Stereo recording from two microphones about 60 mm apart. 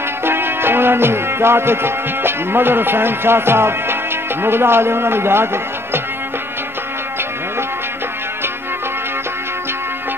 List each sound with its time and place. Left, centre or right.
0.2 s music: right